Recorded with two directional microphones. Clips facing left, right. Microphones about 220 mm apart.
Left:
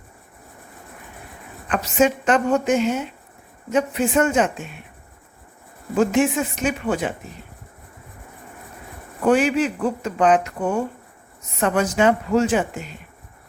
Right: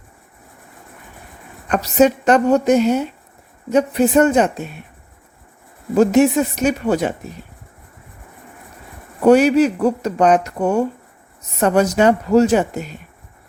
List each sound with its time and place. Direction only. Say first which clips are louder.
1.7 s speech: right 5 dB; 40° right (ahead or behind)
6.0 s speech: right 5 dB; 40° right (ahead or behind)
9.2 s speech: right 6 dB; 40° right (ahead or behind)